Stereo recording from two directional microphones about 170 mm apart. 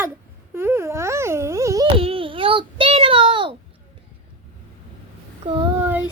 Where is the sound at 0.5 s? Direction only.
15° right (ahead or behind).